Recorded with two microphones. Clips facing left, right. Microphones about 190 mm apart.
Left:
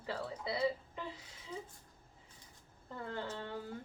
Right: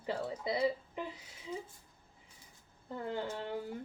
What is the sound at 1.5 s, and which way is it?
Speech, 5° right (ahead or behind).